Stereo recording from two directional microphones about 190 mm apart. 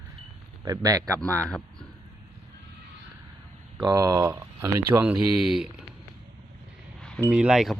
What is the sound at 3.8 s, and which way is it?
A man's voice, 20° right (ahead or behind).